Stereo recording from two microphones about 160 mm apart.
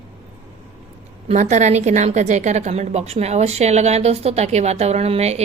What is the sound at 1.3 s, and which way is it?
A woman's voice, 45° right (ahead or behind).